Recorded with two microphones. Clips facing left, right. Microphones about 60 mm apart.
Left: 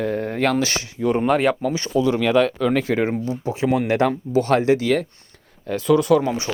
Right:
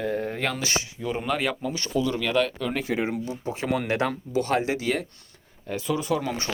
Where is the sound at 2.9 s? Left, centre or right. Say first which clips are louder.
Left 6 dB; left.